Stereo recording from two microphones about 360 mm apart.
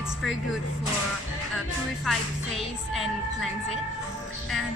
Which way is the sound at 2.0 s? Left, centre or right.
Centre.